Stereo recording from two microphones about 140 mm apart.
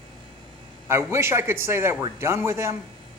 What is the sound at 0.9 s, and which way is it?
A man's voice, 20° right (ahead or behind).